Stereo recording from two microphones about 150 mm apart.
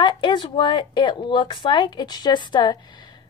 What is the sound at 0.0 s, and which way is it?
Speech, 30° left (ahead or behind).